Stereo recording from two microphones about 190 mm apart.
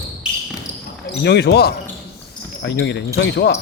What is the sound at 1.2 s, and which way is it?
Speech, 60° left (ahead or behind).